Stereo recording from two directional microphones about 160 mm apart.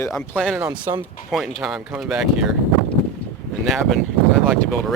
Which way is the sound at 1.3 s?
Centre (ahead or behind).